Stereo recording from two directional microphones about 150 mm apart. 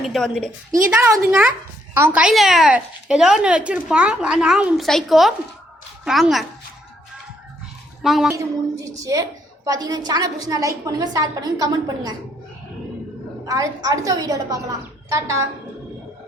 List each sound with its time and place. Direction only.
0.0 s speech: centre (ahead or behind)
1.2 s a child's voice: 10° right (ahead or behind)
8.0 s speech: centre (ahead or behind)
8.3 s a woman's voice: 20° right (ahead or behind)
13.4 s a woman's voice: 20° right (ahead or behind)